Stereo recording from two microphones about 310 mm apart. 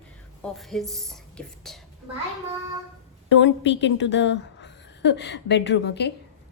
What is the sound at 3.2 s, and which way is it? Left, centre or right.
A woman's voice, left.